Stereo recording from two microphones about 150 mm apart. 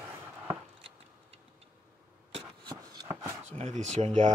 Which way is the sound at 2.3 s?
30° right (ahead or behind).